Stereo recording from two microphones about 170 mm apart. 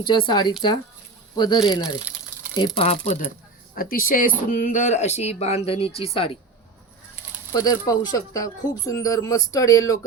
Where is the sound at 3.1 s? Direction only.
50° left (ahead or behind); by 6.3 s 35° left (ahead or behind).